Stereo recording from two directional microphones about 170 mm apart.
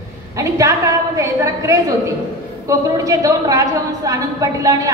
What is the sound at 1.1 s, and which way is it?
A woman's voice, 15° right (ahead or behind).